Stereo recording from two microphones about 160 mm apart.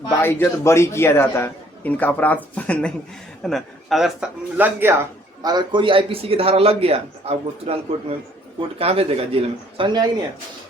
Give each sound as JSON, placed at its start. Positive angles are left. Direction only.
{"t": 0.2, "sound": "a man's voice", "side_deg": 15}
{"t": 8.8, "sound": "speech", "side_deg": -35}